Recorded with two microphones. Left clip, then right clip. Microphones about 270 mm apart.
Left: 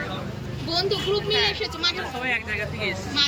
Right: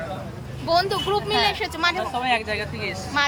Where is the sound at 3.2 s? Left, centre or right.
Centre.